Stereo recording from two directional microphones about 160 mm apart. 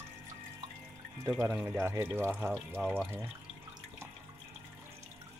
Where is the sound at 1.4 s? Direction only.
10° right (ahead or behind).